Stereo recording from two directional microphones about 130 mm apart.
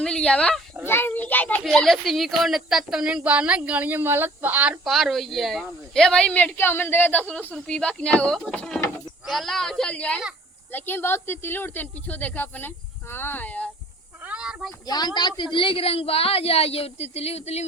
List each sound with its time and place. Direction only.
0.0 s speech: 5° left (ahead or behind)
1.6 s speech: 5° left (ahead or behind)
14.2 s a sound: 10° right (ahead or behind)
14.8 s a woman's voice: 30° left (ahead or behind); by 17.7 s 55° left (ahead or behind)